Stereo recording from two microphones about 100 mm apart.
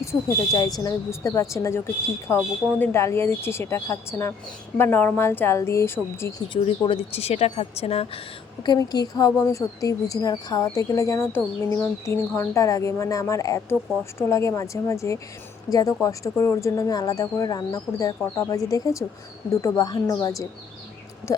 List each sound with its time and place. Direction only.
0.0 s speech: 35° left (ahead or behind)
6.5 s a woman's voice: 60° left (ahead or behind); by 8.2 s 85° left
8.6 s speech: 45° left (ahead or behind)